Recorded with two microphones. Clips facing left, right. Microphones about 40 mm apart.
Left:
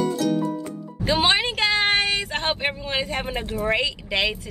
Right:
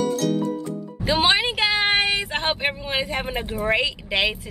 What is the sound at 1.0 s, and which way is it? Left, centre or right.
A woman's voice, centre.